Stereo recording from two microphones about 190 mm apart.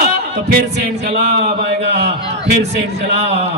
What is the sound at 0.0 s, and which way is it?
Speech, 50° right (ahead or behind).